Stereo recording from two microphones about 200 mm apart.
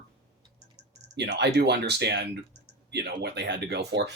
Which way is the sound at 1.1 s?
60° right (ahead or behind).